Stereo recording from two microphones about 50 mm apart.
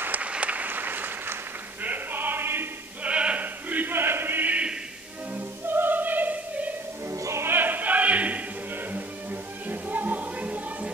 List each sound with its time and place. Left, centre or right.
0.2 s applause: right
3.0 s male singing: right
3.9 s choir: right
4.5 s music: right
5.3 s music: right
7.1 s music: right
7.4 s choir: right
8.9 s music: right